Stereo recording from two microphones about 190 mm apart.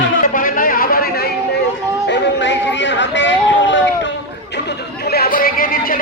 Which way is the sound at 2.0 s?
65° left (ahead or behind).